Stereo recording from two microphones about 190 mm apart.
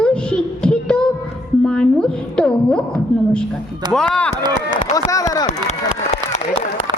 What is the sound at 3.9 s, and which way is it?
Speech, 5° left (ahead or behind).